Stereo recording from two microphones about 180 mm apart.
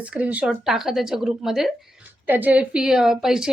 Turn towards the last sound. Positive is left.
turn(degrees=-5)  # may be behind; listen again after turning